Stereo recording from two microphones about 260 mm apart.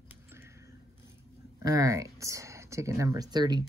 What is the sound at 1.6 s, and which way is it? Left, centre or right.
Speech, centre.